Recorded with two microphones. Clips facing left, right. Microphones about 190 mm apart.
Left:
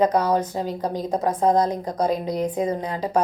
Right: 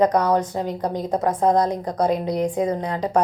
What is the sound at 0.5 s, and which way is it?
Speech, 20° right (ahead or behind).